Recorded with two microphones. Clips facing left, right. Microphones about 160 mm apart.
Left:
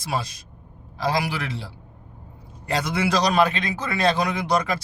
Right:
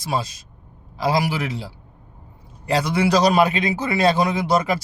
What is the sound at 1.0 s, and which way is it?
A man's voice, 5° right (ahead or behind).